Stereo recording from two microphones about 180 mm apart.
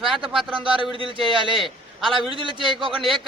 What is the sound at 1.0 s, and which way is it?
Speech, 30° right (ahead or behind).